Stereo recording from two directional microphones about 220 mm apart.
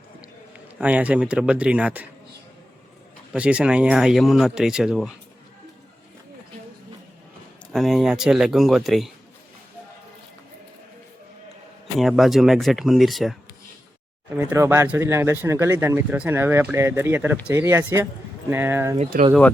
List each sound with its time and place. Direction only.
0.8 s speech: 5° right (ahead or behind)
3.3 s speech: 5° right (ahead or behind)
7.7 s speech: centre (ahead or behind)
11.9 s speech: centre (ahead or behind)
14.3 s speech: 10° right (ahead or behind)
18.9 s speech: 30° right (ahead or behind)